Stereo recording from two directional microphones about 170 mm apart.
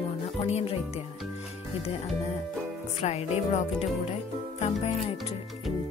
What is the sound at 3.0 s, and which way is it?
Speech, 40° left (ahead or behind).